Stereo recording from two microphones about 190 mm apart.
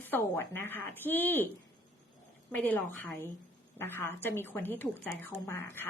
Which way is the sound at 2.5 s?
10° left (ahead or behind).